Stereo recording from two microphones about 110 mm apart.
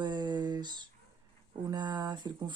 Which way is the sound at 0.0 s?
40° right (ahead or behind).